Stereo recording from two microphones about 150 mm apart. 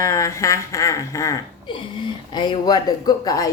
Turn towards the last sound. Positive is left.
turn(degrees=25)  # may be behind; listen again after turning